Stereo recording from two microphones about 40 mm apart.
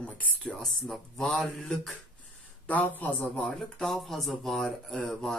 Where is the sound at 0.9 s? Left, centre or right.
Centre.